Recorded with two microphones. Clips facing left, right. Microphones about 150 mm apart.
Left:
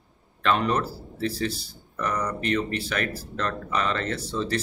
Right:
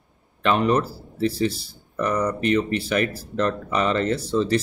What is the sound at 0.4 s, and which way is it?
Speech, 15° right (ahead or behind).